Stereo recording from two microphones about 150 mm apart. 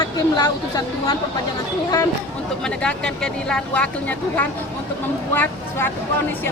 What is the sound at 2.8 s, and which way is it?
Speech, 5° left (ahead or behind).